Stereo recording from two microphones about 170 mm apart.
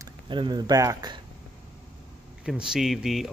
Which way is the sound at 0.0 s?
25° right (ahead or behind).